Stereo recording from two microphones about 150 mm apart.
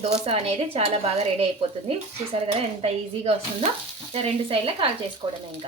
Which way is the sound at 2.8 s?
45° right (ahead or behind).